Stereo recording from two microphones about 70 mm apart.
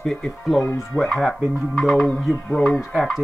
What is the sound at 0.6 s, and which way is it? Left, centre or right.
Speech, left.